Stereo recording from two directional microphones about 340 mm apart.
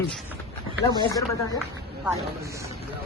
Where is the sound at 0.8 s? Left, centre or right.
Centre.